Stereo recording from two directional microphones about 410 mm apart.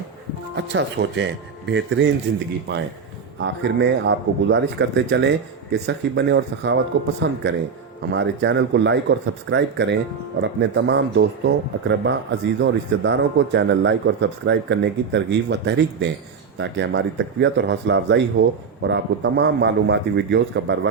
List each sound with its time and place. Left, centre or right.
0.5 s speech: right
3.4 s speech: right
8.1 s speech: right